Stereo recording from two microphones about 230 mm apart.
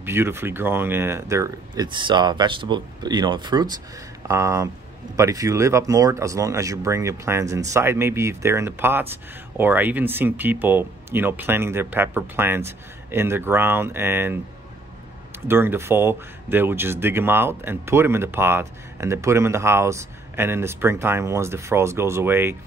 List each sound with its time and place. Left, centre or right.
0.0 s speech: centre
15.4 s speech: centre